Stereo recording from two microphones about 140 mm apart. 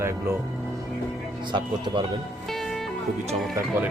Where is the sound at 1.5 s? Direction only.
35° right (ahead or behind).